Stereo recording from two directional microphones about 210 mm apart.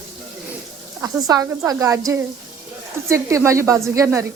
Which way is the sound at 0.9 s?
15° right (ahead or behind).